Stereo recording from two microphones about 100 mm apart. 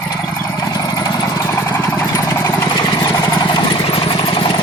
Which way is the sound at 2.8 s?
40° left (ahead or behind).